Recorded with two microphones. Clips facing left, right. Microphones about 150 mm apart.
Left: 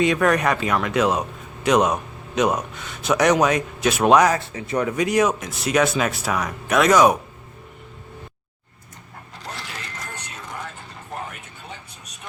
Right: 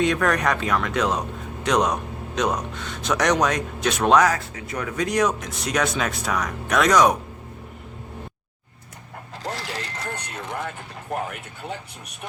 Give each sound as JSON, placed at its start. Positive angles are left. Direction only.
{"t": 0.0, "sound": "speech", "side_deg": 5}
{"t": 4.3, "sound": "speech", "side_deg": 25}
{"t": 4.9, "sound": "speech", "side_deg": 5}
{"t": 9.4, "sound": "dog", "side_deg": -35}
{"t": 11.3, "sound": "vehicle", "side_deg": -65}